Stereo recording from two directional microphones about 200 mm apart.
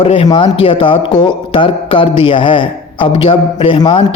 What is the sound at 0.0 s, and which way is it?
A man's voice, 25° left (ahead or behind).